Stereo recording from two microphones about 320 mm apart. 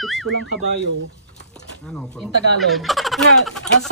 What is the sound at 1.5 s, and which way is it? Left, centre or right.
Speech, centre.